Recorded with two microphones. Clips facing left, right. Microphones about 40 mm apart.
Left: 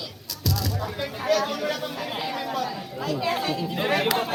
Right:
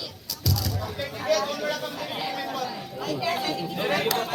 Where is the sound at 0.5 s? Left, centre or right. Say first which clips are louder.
Left 2 dB; left.